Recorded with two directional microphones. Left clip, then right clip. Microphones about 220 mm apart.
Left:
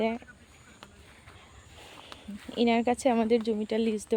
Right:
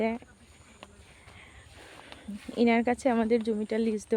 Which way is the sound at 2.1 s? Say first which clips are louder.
Left 1 dB; 40° left (ahead or behind).